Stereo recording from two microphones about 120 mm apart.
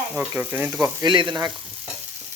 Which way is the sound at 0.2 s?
15° right (ahead or behind).